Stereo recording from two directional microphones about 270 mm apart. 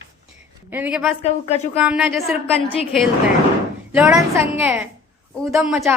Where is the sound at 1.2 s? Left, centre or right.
Left.